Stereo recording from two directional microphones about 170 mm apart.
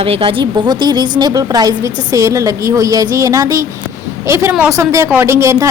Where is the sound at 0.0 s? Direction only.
35° right (ahead or behind).